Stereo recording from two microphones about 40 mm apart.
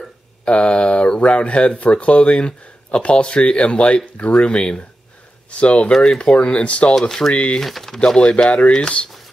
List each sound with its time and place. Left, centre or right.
0.5 s speech: left
5.9 s speech: centre
7.6 s speech: centre
8.2 s speech: left